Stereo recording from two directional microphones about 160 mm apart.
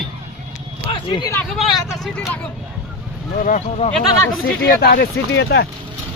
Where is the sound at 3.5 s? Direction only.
45° left (ahead or behind).